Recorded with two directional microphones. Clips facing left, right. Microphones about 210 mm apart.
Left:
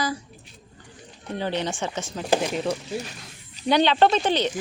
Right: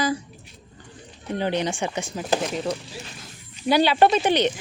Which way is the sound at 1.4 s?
15° right (ahead or behind).